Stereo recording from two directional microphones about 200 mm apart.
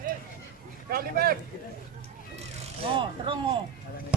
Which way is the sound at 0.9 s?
50° right (ahead or behind).